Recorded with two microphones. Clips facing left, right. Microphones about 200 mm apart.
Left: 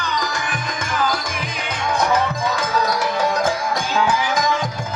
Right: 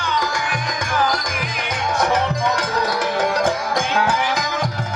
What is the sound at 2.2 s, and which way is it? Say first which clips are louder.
Music: right 1 dB; 65° right (ahead or behind).